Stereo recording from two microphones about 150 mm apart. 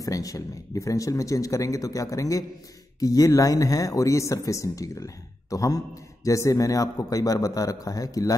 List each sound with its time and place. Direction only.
0.0 s speech: 25° left (ahead or behind)